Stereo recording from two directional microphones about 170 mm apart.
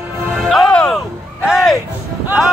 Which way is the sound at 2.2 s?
5° right (ahead or behind).